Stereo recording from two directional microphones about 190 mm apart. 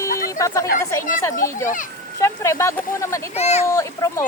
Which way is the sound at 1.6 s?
45° left (ahead or behind).